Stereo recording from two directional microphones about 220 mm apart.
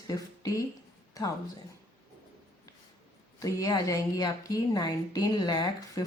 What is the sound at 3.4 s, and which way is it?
A woman's voice, 15° left (ahead or behind).